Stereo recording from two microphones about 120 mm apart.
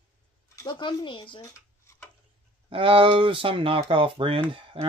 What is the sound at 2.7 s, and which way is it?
Speech, 50° right (ahead or behind).